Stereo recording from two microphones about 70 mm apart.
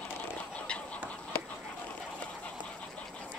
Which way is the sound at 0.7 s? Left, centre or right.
Centre.